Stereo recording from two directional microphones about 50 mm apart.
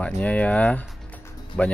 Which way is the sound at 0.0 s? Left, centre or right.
Left.